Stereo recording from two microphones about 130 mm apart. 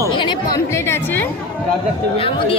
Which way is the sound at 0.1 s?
35° left (ahead or behind).